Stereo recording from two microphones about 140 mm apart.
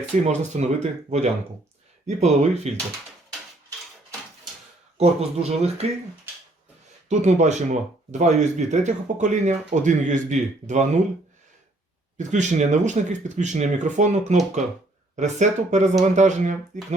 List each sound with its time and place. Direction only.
0.3 s speech: 55° right (ahead or behind)
4.9 s speech: 50° right (ahead or behind)
7.1 s speech: 55° right (ahead or behind)
12.1 s speech: 60° right (ahead or behind)